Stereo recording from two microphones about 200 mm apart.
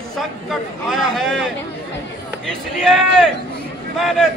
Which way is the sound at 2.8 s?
5° left (ahead or behind).